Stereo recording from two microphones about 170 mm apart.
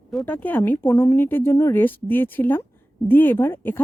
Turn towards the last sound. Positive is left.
turn(degrees=15)  # may be behind; listen again after turning